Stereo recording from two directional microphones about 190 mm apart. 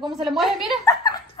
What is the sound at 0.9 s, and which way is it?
Speech, 20° left (ahead or behind).